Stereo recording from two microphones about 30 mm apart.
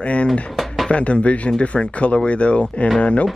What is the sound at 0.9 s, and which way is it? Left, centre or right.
Speech, left.